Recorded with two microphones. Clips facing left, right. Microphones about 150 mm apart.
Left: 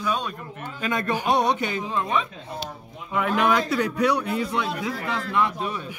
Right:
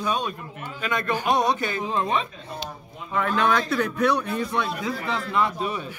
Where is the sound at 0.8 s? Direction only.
40° left (ahead or behind).